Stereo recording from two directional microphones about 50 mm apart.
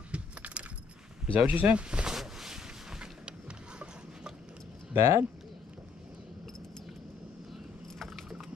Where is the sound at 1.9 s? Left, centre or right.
Centre.